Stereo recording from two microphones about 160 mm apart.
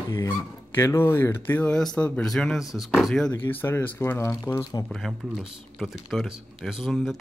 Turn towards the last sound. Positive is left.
turn(degrees=0)  # may be behind; listen again after turning